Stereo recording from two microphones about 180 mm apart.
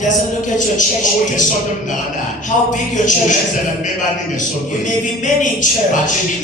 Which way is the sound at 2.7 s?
45° left (ahead or behind).